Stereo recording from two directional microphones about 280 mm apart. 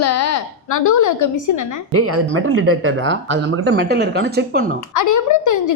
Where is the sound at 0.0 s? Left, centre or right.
Left.